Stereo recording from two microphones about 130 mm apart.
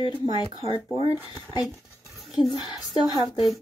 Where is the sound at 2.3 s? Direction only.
Centre (ahead or behind).